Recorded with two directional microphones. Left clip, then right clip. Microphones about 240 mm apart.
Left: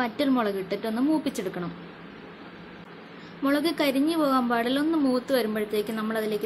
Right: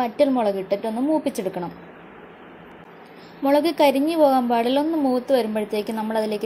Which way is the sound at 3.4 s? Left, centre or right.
Centre.